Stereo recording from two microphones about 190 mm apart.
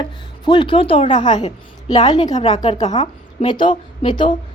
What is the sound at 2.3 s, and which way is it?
Speech, 35° left (ahead or behind).